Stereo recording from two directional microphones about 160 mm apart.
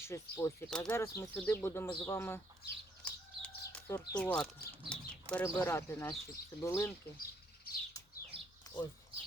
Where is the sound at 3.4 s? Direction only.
10° left (ahead or behind).